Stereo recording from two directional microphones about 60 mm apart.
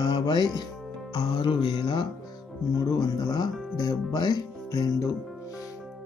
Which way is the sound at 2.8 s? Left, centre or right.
Left.